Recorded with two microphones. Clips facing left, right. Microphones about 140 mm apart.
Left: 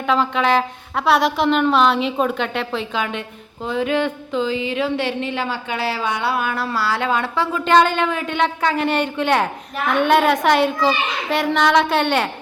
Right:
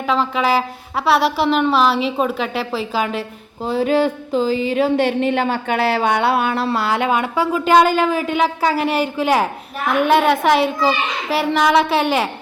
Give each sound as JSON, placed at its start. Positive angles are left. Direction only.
{"t": 0.0, "sound": "a woman's voice", "side_deg": 0}
{"t": 3.2, "sound": "speech", "side_deg": -35}
{"t": 6.3, "sound": "a woman's voice", "side_deg": -25}